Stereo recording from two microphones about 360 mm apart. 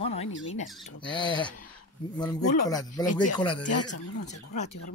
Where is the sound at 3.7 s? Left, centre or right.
Left.